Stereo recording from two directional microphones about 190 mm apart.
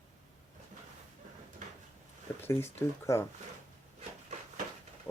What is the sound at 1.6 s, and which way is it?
Drawer open or close, 40° right (ahead or behind).